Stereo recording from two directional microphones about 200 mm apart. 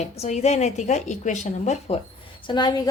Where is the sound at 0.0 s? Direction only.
35° left (ahead or behind).